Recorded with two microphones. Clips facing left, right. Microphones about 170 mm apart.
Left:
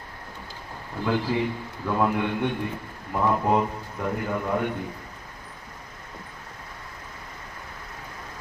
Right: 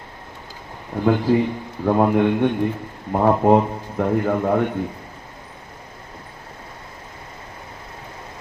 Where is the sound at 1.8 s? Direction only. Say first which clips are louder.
Right 8 dB; 50° right (ahead or behind).